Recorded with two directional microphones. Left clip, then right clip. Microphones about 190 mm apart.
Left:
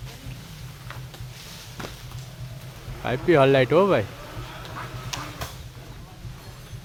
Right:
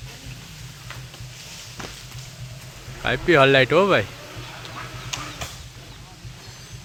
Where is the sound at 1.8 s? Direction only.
35° right (ahead or behind).